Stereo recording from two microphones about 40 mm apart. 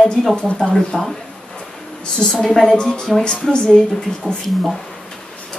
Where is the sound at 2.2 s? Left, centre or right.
Centre.